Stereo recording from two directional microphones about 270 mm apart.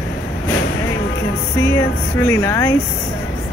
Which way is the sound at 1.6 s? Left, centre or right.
Centre.